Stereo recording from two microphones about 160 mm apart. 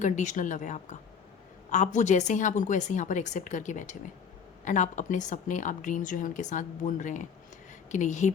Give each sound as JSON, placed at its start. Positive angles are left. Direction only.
{"t": 0.0, "sound": "speech", "side_deg": 50}